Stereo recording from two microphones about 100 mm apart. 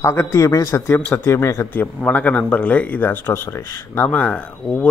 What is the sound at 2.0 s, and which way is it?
A man's voice, 15° left (ahead or behind).